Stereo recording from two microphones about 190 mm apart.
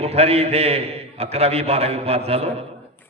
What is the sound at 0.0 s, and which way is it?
A man's voice, 35° right (ahead or behind).